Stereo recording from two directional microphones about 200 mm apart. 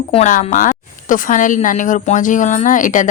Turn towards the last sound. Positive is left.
turn(degrees=40)  # may be behind; listen again after turning